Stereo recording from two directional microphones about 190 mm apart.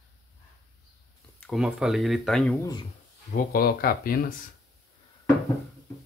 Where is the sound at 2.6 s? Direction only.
20° left (ahead or behind).